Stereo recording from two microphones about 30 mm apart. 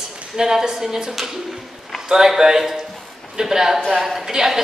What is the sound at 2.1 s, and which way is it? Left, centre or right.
A woman's voice, centre.